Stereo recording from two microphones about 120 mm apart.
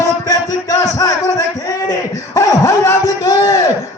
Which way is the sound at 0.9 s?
25° left (ahead or behind).